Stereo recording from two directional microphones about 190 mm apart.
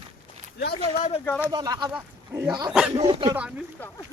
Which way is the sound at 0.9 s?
40° left (ahead or behind).